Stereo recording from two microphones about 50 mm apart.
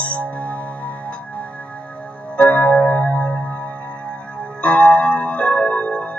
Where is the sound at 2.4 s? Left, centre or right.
Left.